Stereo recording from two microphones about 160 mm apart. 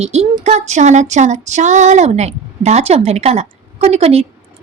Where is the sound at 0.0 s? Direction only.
45° right (ahead or behind).